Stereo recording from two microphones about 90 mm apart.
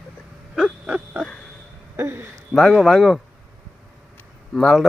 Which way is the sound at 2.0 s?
25° right (ahead or behind).